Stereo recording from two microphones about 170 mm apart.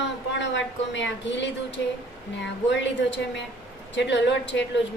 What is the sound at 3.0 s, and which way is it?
Speech, 90° left.